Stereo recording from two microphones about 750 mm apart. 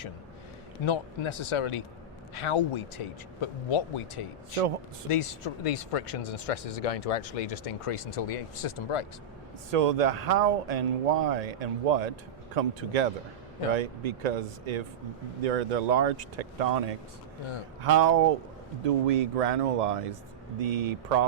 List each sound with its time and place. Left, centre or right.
0.9 s speech: left
5.2 s speech: left
9.7 s speech: right